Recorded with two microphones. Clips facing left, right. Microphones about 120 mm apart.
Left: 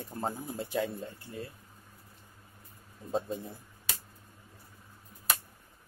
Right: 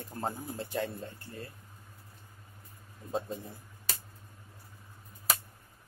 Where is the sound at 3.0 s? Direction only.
20° left (ahead or behind).